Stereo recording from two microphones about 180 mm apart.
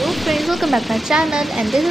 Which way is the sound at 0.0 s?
Centre (ahead or behind).